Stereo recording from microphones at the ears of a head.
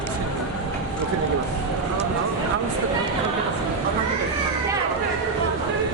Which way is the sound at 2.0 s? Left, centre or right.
Right.